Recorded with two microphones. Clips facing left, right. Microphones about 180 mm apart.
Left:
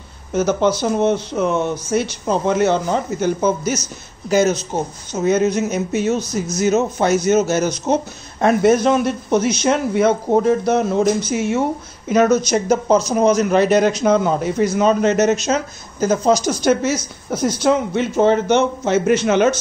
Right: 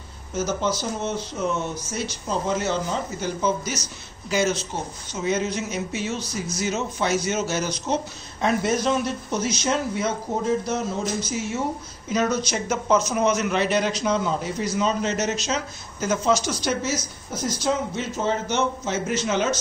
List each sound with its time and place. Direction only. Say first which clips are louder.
0.3 s a man's voice: left 8 dB; 65° left (ahead or behind)
12.1 s a man's voice: left 9 dB; 50° left (ahead or behind)
16.8 s speech: left 7 dB; 60° left (ahead or behind)